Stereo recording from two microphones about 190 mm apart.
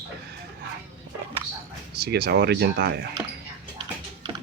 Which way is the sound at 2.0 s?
55° right (ahead or behind).